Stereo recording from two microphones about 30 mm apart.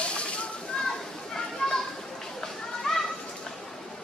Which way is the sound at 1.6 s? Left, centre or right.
Left.